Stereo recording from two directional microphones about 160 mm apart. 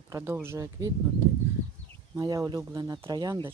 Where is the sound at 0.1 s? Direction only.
15° right (ahead or behind).